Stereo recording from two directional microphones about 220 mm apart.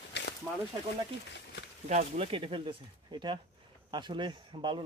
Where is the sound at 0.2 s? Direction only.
50° left (ahead or behind).